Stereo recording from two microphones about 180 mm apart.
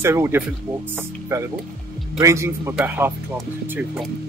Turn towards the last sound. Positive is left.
turn(degrees=-10)  # may be behind; listen again after turning